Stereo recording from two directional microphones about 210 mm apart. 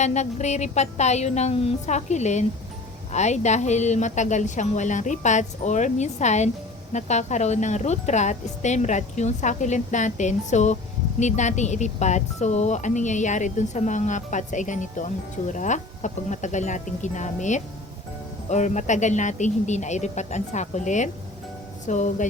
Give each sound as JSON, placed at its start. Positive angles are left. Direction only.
{"t": 0.0, "sound": "speech", "side_deg": 35}